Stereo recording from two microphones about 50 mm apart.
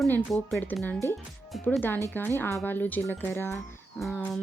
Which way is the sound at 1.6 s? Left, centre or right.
Left.